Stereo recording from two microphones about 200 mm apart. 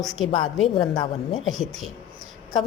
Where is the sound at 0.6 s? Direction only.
25° left (ahead or behind).